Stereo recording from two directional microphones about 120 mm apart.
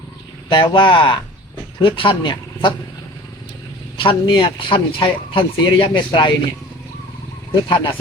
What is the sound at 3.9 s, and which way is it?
A man's voice, 45° left (ahead or behind).